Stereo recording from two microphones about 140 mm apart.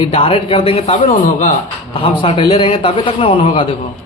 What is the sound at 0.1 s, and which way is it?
Speech, 45° left (ahead or behind).